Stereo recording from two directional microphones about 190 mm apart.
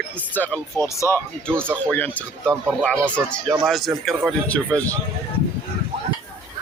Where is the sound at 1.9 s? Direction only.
10° left (ahead or behind).